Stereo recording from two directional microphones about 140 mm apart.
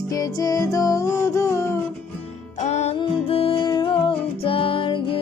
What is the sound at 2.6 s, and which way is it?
Music, 55° left (ahead or behind).